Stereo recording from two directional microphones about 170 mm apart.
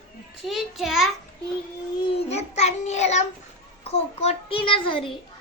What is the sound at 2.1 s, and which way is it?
Child singing, 40° left (ahead or behind).